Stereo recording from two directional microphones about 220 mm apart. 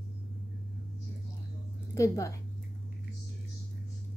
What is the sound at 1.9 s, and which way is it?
Speech, 15° left (ahead or behind).